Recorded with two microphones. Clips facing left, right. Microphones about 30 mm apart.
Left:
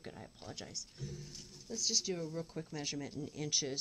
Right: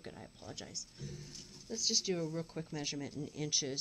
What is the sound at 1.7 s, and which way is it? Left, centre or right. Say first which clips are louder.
Speech: right 1 dB; centre.